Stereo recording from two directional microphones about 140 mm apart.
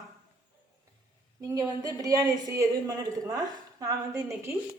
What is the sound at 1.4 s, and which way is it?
A woman's voice, 25° right (ahead or behind).